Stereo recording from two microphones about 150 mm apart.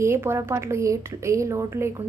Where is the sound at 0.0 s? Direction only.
15° right (ahead or behind).